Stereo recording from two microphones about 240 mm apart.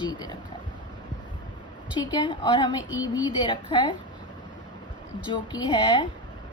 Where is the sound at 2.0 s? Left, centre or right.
Centre.